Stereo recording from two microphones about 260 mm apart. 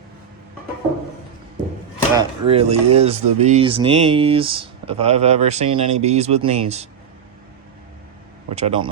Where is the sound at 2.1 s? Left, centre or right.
Centre.